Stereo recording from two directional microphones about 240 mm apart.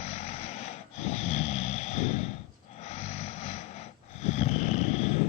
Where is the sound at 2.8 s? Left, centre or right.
Left.